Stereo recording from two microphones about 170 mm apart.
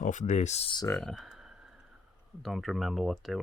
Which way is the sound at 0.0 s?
45° left (ahead or behind).